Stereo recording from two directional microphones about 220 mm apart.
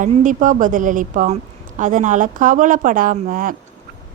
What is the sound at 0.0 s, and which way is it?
Speech, 35° right (ahead or behind).